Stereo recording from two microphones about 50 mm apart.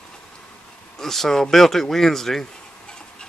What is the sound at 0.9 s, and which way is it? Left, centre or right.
Speech, centre.